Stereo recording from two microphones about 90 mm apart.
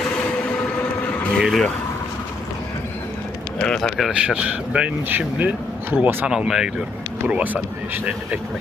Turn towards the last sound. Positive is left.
turn(degrees=-15)  # may be behind; listen again after turning